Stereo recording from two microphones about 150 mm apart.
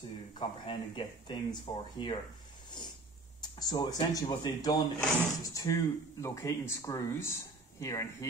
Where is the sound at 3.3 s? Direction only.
25° left (ahead or behind).